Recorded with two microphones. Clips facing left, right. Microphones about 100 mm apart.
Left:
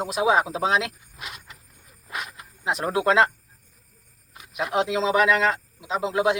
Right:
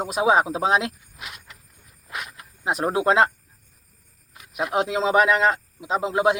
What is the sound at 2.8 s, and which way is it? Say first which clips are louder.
Speech: right 1 dB; 25° right (ahead or behind).